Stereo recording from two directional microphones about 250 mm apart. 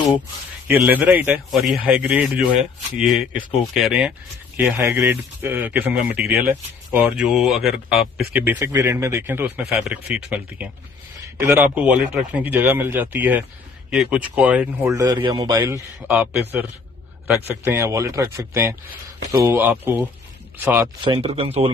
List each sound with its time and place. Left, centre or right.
0.9 s speech: centre
21.0 s speech: right